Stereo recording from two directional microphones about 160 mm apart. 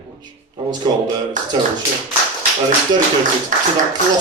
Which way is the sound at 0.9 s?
25° right (ahead or behind).